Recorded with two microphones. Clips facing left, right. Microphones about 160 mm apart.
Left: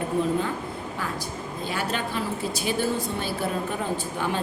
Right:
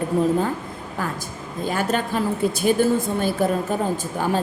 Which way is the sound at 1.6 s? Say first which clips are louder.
Right 6 dB; 45° right (ahead or behind).